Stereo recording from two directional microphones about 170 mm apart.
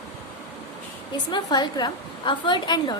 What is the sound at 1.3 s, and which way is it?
A woman's voice, 25° left (ahead or behind).